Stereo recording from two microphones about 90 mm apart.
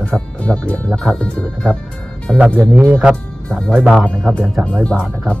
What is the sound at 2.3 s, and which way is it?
Speech, 20° right (ahead or behind).